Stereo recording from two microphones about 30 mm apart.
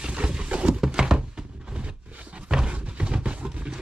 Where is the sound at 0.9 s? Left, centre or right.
Right.